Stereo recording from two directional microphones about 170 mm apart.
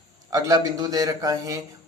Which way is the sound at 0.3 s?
20° right (ahead or behind).